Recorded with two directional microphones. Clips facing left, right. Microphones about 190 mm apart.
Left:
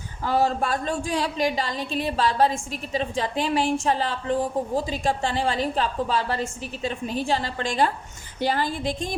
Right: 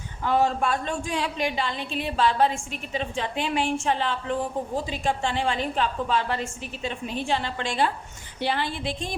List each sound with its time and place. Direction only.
0.3 s a woman's voice: 35° left (ahead or behind)